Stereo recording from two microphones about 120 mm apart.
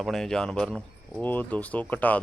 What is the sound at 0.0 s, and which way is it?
Speech, 5° left (ahead or behind).